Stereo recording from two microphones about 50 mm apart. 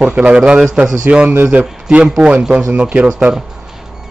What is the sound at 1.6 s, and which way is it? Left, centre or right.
A man's voice, centre.